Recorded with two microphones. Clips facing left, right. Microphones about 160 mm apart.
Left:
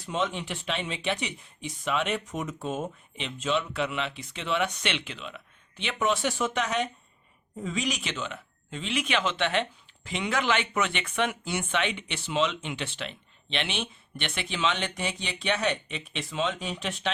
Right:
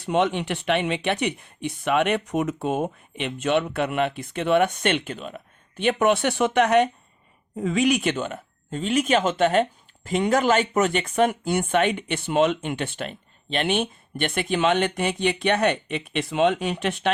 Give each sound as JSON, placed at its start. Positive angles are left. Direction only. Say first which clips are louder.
{"t": 0.0, "sound": "speech", "louder": "right 8 dB", "side_deg": -65}